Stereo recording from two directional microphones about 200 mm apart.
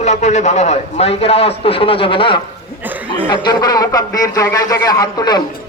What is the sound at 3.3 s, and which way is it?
A man's voice, 20° left (ahead or behind).